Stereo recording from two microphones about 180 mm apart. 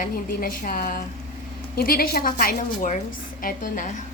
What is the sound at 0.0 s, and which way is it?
A woman's voice, 50° left (ahead or behind).